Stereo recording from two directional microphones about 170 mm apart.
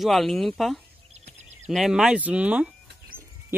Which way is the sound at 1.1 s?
40° right (ahead or behind).